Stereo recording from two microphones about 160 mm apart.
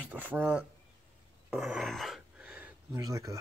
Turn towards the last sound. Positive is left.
turn(degrees=-20)  # may be behind; listen again after turning